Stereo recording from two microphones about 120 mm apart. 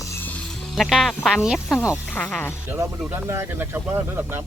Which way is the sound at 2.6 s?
20° right (ahead or behind).